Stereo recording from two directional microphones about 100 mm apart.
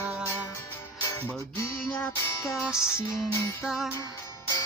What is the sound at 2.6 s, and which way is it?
Music, 5° right (ahead or behind).